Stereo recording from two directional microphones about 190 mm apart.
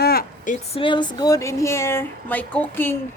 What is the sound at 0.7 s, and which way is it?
Speech, 25° left (ahead or behind).